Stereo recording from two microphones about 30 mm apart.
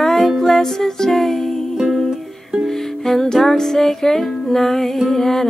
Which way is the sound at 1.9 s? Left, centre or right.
Centre.